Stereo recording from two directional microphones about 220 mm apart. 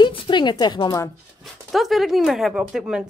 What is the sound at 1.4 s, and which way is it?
Speech, centre (ahead or behind).